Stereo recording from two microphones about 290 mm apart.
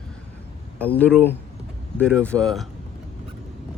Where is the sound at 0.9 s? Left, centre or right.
Centre.